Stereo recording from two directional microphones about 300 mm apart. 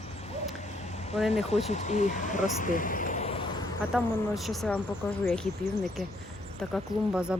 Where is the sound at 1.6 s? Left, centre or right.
Left.